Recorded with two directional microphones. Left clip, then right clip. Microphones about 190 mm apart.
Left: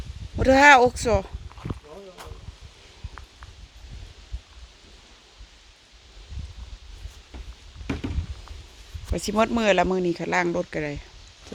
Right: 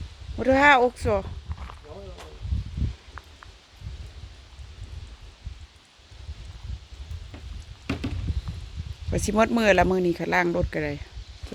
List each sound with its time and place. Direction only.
0.3 s speech: 20° left (ahead or behind)
9.1 s speech: 10° right (ahead or behind)